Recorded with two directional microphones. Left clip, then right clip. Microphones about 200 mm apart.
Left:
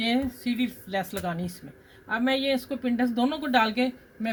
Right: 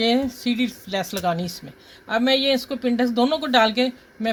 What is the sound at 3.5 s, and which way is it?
Speech, centre (ahead or behind).